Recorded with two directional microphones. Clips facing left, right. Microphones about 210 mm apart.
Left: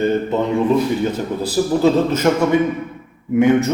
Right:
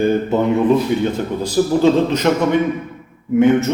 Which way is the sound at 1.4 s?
5° left (ahead or behind).